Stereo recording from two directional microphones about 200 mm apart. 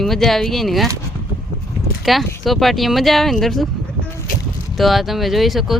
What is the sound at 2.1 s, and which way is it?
Speech, centre (ahead or behind).